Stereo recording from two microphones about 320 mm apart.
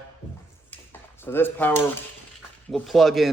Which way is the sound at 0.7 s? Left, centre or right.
Centre.